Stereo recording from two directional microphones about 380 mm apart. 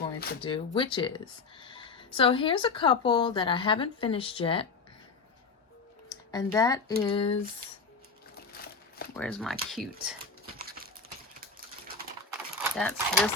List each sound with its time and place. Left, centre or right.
0.0 s speech: centre
6.3 s speech: centre
8.4 s a sound: left
9.1 s speech: centre
10.5 s a sound: right
12.7 s speech: centre